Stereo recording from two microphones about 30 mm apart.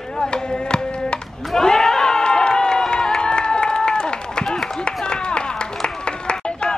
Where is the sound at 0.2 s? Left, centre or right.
Left.